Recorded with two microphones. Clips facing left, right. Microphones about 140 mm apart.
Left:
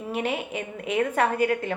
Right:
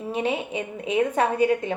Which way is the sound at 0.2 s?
20° right (ahead or behind).